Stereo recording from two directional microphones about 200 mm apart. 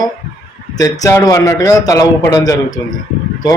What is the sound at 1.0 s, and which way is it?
A man's voice, 15° left (ahead or behind).